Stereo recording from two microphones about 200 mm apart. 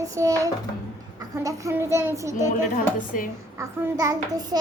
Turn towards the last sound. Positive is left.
turn(degrees=-20)  # may be behind; listen again after turning